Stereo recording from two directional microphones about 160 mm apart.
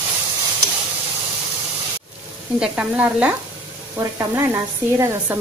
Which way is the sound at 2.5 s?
5° right (ahead or behind).